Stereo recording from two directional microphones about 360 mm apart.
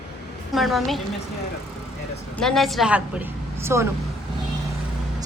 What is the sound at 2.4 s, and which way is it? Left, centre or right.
A woman's voice, centre.